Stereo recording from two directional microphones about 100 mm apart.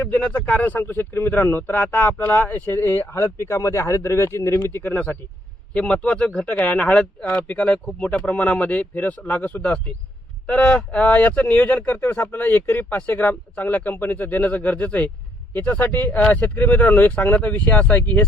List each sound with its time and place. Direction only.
0.1 s speech: 15° left (ahead or behind)